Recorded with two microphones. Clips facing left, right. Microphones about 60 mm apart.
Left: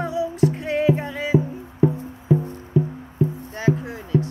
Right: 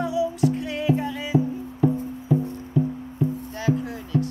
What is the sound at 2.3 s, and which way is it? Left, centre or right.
Music, left.